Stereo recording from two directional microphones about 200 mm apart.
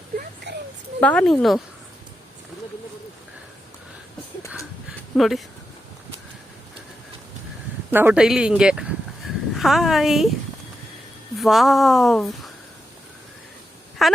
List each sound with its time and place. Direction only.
0.5 s a sound: 60° right (ahead or behind)
1.0 s speech: 5° left (ahead or behind)
5.1 s speech: centre (ahead or behind)
7.9 s speech: 10° right (ahead or behind)
11.3 s speech: centre (ahead or behind)
14.0 s speech: centre (ahead or behind)